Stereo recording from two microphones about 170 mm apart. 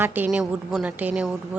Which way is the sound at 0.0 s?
10° right (ahead or behind).